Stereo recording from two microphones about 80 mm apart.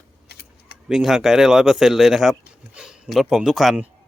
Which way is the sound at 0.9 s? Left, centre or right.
Centre.